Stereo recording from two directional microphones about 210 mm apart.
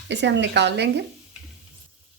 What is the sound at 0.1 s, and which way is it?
Speech, 55° right (ahead or behind).